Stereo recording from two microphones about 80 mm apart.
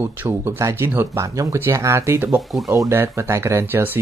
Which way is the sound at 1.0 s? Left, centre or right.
Right.